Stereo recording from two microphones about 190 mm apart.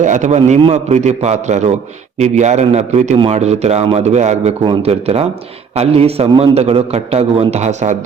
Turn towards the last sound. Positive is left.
turn(degrees=-35)  # may be behind; listen again after turning